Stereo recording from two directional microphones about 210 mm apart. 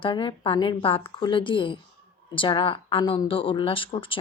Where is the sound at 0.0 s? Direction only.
25° left (ahead or behind).